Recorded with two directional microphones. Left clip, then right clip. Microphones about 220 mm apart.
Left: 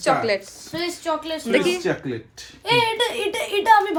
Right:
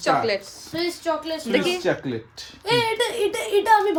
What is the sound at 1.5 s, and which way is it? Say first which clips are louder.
Speech: left 2 dB; 10° right (ahead or behind).